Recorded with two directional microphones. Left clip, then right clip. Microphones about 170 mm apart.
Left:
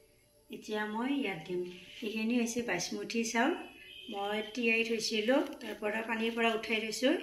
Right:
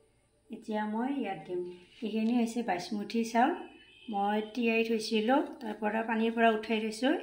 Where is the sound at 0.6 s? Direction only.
65° right (ahead or behind).